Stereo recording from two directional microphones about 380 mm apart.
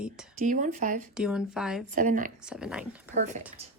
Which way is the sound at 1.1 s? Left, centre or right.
Centre.